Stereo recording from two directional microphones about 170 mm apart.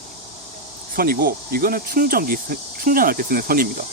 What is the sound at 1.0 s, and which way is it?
Speech, 60° right (ahead or behind).